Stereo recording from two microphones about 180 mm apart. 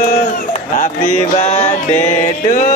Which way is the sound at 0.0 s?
40° left (ahead or behind).